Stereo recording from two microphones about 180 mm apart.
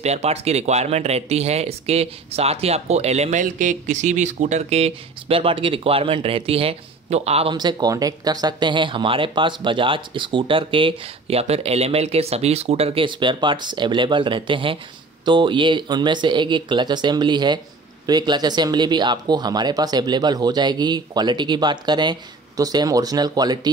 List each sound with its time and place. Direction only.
0.0 s speech: 35° right (ahead or behind)
7.5 s speech: 20° right (ahead or behind)